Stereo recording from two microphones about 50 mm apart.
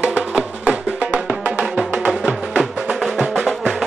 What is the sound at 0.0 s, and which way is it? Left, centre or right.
Music, right.